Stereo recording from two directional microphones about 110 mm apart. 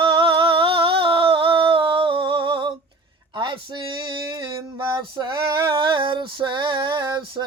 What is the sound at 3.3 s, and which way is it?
Male singing, 45° right (ahead or behind).